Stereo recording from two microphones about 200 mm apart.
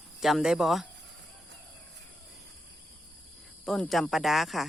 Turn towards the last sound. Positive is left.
turn(degrees=0)  # may be behind; listen again after turning